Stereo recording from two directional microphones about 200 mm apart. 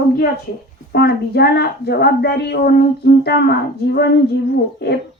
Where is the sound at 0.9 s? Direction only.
55° left (ahead or behind).